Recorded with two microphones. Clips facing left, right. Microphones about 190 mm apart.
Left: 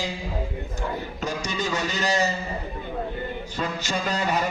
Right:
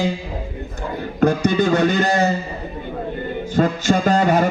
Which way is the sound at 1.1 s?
55° right (ahead or behind).